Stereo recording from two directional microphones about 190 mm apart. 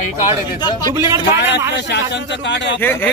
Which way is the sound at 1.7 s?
65° left (ahead or behind).